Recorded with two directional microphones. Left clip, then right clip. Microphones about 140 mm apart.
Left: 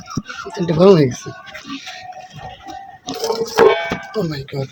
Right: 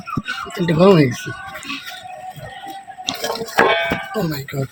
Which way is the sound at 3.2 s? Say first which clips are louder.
Left 4 dB; 90° left.